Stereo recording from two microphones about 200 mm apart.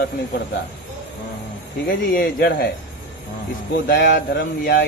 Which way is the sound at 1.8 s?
50° left (ahead or behind).